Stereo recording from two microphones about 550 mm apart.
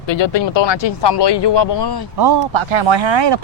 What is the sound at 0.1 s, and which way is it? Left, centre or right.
Speech, left.